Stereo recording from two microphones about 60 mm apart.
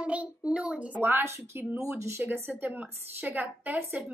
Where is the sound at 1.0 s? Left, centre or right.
Right.